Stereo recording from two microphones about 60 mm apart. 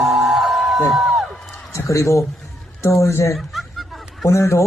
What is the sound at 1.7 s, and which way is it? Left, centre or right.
Speech, left.